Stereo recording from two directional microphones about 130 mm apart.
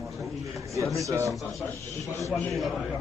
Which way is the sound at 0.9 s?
25° right (ahead or behind).